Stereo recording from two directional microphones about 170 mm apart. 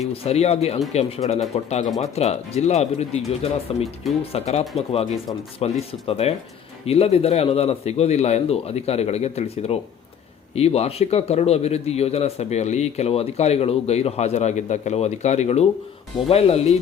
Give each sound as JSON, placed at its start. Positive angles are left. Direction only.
{"t": 0.1, "sound": "a man's voice", "side_deg": 35}
{"t": 3.8, "sound": "speech", "side_deg": 0}
{"t": 4.3, "sound": "a man's voice", "side_deg": 40}